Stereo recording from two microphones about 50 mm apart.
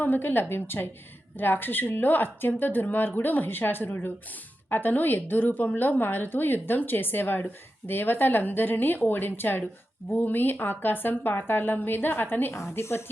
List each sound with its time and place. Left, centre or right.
0.0 s a woman's voice: left